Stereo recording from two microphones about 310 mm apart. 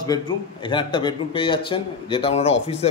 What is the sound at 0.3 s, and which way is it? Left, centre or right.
Speech, centre.